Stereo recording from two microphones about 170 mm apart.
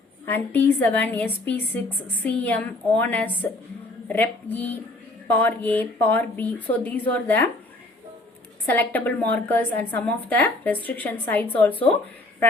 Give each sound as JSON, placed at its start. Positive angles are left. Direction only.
{"t": 0.3, "sound": "a woman's voice", "side_deg": 10}
{"t": 8.6, "sound": "a woman's voice", "side_deg": 10}